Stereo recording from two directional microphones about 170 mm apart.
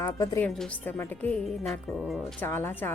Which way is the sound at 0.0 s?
15° left (ahead or behind).